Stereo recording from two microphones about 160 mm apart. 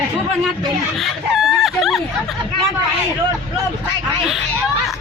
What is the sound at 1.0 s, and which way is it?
Chicken, centre (ahead or behind).